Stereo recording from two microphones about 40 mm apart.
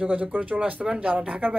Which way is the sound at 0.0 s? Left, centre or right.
Right.